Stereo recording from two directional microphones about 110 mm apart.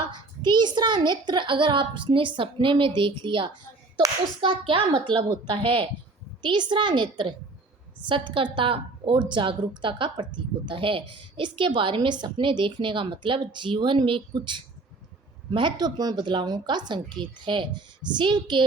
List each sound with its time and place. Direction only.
0.1 s a woman's voice: 40° right (ahead or behind)